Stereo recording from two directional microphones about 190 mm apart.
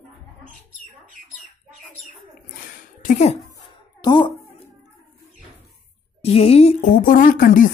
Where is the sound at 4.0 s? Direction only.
25° left (ahead or behind).